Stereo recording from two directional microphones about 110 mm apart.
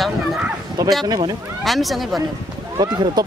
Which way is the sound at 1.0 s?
40° right (ahead or behind).